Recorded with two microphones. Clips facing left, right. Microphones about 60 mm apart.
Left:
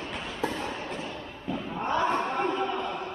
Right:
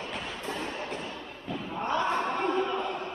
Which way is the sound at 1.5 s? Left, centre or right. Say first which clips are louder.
Left 1 dB; centre.